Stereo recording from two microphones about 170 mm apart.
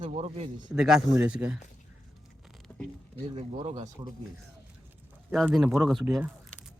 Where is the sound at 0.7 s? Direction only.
5° right (ahead or behind).